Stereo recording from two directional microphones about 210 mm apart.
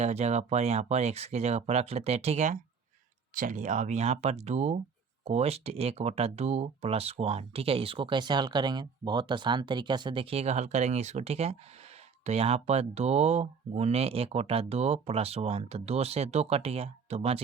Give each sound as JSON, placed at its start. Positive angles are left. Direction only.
{"t": 0.0, "sound": "speech", "side_deg": -30}